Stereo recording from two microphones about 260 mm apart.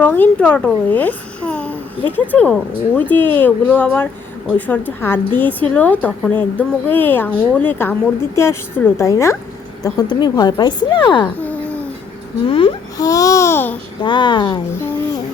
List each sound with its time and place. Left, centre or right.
0.0 s a child's voice: centre
12.5 s a child's voice: centre